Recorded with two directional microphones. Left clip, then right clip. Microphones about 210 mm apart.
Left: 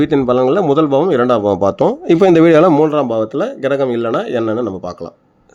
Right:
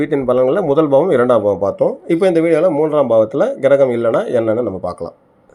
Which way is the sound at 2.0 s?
35° left (ahead or behind).